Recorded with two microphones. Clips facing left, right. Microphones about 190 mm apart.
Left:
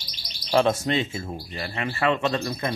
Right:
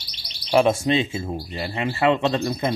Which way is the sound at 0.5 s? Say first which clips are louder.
Right 3 dB; 10° right (ahead or behind).